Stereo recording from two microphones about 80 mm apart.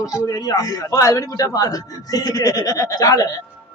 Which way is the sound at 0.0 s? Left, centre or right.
Left.